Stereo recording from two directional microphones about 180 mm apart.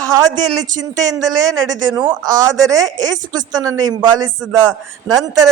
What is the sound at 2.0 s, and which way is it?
A man's voice, 25° right (ahead or behind).